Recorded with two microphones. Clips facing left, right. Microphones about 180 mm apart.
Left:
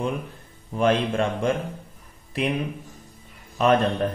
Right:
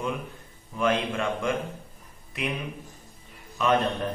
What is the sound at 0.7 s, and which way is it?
Speech, 35° left (ahead or behind).